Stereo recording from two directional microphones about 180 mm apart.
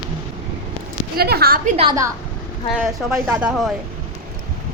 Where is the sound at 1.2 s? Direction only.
60° right (ahead or behind).